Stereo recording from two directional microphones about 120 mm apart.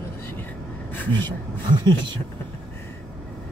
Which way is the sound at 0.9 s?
15° left (ahead or behind).